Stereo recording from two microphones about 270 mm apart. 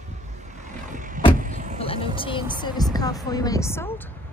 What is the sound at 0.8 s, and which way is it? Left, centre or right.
Vehicle, right.